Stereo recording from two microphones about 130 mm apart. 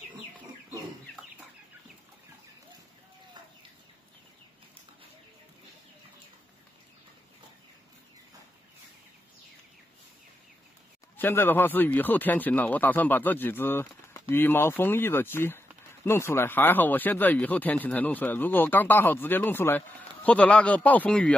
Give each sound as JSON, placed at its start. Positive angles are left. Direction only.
{"t": 11.1, "sound": "speech", "side_deg": 15}